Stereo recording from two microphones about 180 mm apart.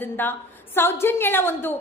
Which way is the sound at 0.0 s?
10° left (ahead or behind).